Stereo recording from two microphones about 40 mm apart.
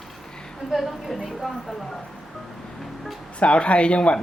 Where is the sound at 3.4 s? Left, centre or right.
Left.